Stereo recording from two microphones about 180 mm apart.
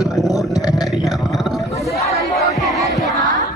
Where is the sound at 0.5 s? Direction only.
20° left (ahead or behind).